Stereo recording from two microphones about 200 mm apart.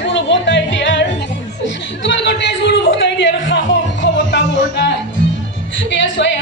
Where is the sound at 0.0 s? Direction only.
65° left (ahead or behind).